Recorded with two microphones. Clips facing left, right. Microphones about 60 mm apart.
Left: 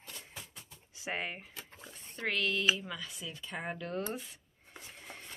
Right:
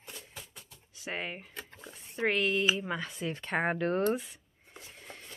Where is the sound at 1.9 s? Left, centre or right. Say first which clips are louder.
Right 6 dB; right.